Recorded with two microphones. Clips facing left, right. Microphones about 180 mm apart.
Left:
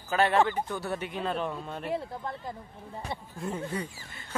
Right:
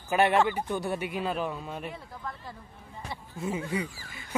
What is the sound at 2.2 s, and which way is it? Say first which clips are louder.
Speech: left 3 dB; 30° left (ahead or behind).